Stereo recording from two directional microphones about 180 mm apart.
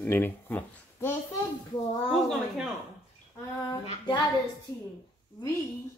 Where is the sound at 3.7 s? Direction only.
25° left (ahead or behind).